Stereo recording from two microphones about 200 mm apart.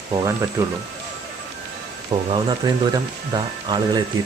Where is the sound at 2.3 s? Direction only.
20° right (ahead or behind).